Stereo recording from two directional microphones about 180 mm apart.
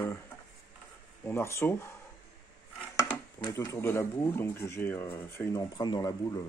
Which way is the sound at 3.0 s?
15° left (ahead or behind).